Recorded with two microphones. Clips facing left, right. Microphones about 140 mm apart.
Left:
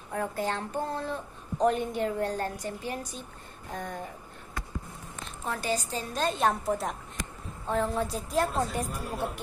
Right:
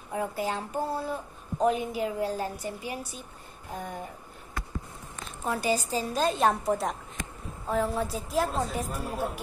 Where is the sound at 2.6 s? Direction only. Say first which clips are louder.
Even; 10° right (ahead or behind).